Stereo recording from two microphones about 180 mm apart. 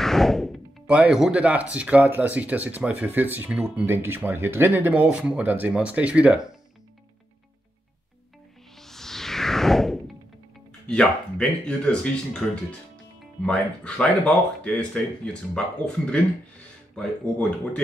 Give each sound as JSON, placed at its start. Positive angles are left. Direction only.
{"t": 0.0, "sound": "speech", "side_deg": 0}
{"t": 8.7, "sound": "music", "side_deg": 0}
{"t": 10.9, "sound": "speech", "side_deg": 5}
{"t": 16.9, "sound": "speech", "side_deg": 5}